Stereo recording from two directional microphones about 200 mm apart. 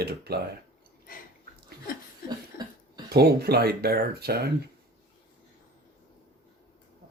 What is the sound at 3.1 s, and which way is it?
Speech, 50° right (ahead or behind).